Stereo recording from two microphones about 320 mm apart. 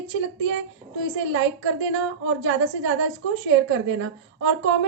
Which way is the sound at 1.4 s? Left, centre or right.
Right.